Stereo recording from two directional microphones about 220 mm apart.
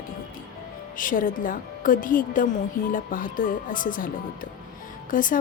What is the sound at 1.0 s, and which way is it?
A woman's voice, 40° left (ahead or behind).